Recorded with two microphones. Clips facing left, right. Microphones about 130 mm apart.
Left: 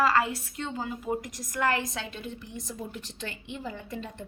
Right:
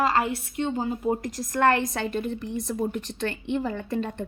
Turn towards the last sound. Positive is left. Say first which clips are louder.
# right 9 dB
turn(degrees=-60)  # may be behind; listen again after turning